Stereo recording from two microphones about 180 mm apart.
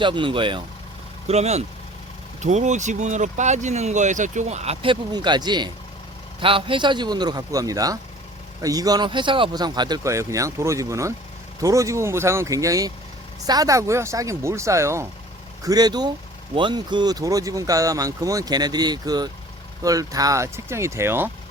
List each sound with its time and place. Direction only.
0.0 s speech: 25° right (ahead or behind)